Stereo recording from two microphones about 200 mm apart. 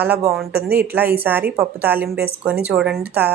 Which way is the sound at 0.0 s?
10° right (ahead or behind).